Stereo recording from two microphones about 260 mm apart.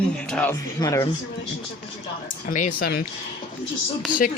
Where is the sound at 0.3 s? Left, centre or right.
Centre.